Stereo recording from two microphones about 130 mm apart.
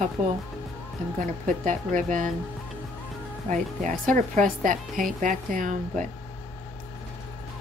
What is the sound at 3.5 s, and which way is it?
A woman's voice, 70° right (ahead or behind).